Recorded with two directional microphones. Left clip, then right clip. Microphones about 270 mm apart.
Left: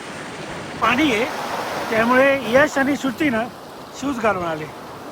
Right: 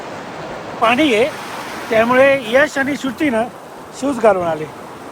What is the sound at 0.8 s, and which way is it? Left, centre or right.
Speech, centre.